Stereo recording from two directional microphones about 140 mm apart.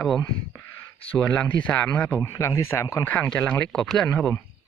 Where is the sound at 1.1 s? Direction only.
10° left (ahead or behind).